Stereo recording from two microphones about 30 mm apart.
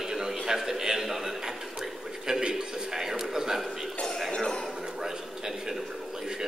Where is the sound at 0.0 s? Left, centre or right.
Centre.